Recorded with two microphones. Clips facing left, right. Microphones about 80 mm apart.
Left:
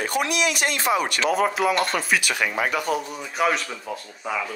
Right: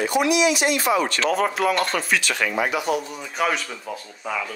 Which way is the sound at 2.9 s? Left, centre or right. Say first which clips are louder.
Right 1 dB; right.